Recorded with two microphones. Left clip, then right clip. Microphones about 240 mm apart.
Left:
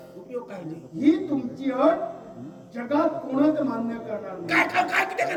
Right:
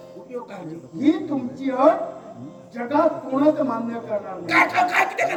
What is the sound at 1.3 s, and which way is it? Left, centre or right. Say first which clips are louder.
Speech: right 1 dB; right.